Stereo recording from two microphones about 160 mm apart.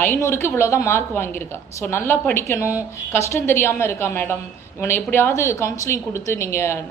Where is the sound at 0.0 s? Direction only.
15° left (ahead or behind).